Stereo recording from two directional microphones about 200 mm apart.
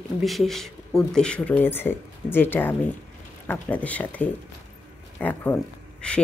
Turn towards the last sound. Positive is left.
turn(degrees=5)  # may be behind; listen again after turning